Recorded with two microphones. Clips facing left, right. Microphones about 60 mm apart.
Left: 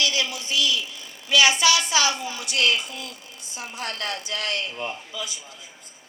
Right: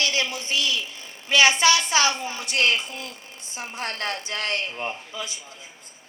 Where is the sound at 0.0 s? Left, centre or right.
Right.